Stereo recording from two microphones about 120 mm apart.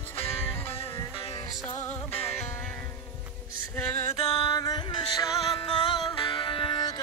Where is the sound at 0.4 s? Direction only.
20° left (ahead or behind).